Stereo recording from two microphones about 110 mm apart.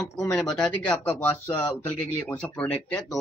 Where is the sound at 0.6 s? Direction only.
10° left (ahead or behind).